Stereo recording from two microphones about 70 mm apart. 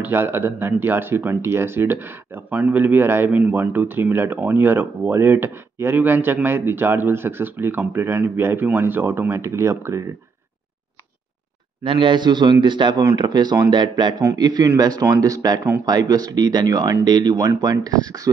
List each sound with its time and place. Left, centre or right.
0.0 s speech: right
3.3 s speech: right
12.2 s speech: right
14.4 s speech: right